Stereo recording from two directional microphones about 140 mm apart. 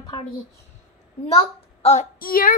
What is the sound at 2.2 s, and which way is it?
Speech, 90° left.